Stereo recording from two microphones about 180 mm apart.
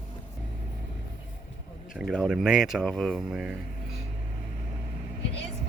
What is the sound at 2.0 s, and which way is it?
Speech, centre (ahead or behind).